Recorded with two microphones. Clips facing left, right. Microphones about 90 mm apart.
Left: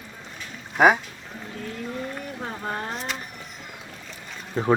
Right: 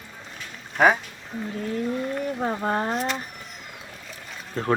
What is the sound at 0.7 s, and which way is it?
Speech, 10° left (ahead or behind).